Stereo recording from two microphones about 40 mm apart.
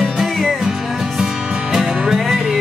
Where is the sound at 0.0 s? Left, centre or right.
Centre.